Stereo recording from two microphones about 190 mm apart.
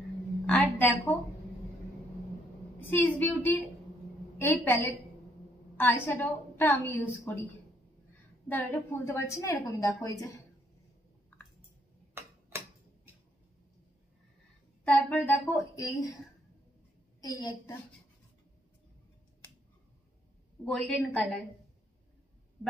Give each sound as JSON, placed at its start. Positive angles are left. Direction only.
{"t": 0.5, "sound": "a sound", "side_deg": 10}
{"t": 3.2, "sound": "a woman's voice", "side_deg": 10}
{"t": 8.5, "sound": "a woman's voice", "side_deg": 10}
{"t": 12.1, "sound": "tick-tock", "side_deg": -10}
{"t": 14.9, "sound": "a woman's voice", "side_deg": 10}
{"t": 17.2, "sound": "a woman's voice", "side_deg": 20}
{"t": 20.6, "sound": "a woman's voice", "side_deg": 0}